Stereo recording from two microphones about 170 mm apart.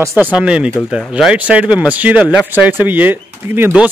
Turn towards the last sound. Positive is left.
turn(degrees=-10)  # may be behind; listen again after turning